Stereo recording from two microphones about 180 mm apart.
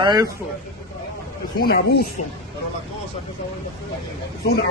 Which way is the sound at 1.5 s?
60° left (ahead or behind).